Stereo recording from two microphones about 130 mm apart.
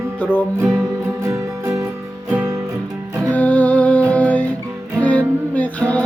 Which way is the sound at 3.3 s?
10° left (ahead or behind).